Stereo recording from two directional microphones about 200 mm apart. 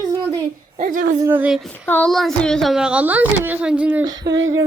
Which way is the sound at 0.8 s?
40° right (ahead or behind).